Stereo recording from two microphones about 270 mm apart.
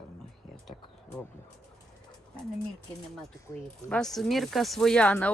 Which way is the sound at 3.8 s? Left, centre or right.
Centre.